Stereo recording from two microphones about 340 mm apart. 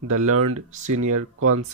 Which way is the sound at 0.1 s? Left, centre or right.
Right.